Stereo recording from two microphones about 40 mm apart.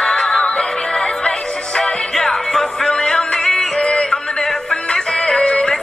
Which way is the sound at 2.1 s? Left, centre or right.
Centre.